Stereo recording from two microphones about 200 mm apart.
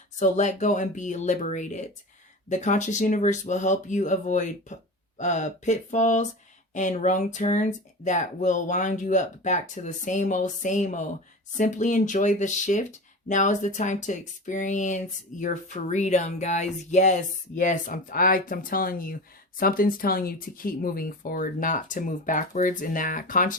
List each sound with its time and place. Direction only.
0.2 s speech: 35° left (ahead or behind)